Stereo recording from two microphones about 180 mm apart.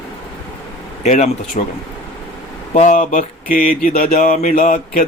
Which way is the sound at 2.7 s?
45° left (ahead or behind).